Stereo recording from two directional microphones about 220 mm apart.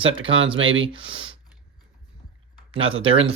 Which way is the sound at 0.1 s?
60° right (ahead or behind).